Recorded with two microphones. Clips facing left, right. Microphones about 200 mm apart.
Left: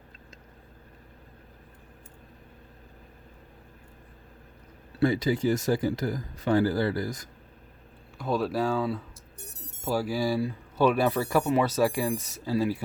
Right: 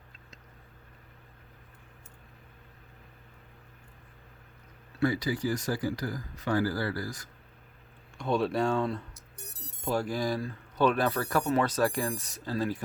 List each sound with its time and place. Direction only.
4.9 s speech: 25° left (ahead or behind)
8.2 s speech: centre (ahead or behind)